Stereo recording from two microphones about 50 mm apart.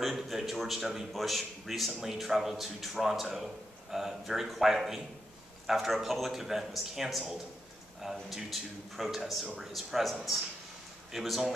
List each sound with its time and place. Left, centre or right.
0.1 s a man's voice: centre